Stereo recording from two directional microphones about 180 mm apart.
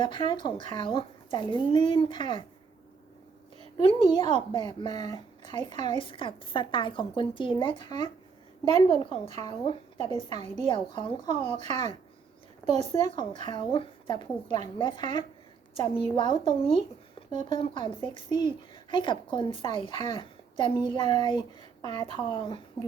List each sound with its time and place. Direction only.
0.0 s a woman's voice: 25° left (ahead or behind)
3.8 s a woman's voice: 25° left (ahead or behind)
9.2 s speech: 35° right (ahead or behind)
10.7 s a woman's voice: 25° left (ahead or behind)
11.5 s a woman's voice: 40° right (ahead or behind)
13.1 s a woman's voice: 25° left (ahead or behind)
14.4 s speech: 40° right (ahead or behind)
14.8 s a woman's voice: 25° left (ahead or behind)
17.2 s a sound: 30° left (ahead or behind)
17.5 s a woman's voice: 30° left (ahead or behind)